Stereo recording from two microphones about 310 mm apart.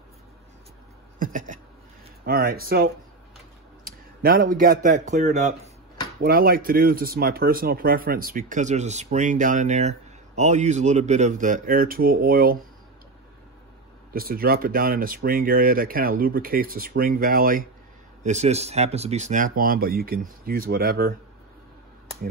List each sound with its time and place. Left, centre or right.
1.2 s speech: right
14.1 s speech: right